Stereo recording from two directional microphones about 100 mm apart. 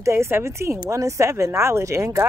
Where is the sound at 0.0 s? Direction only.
25° right (ahead or behind).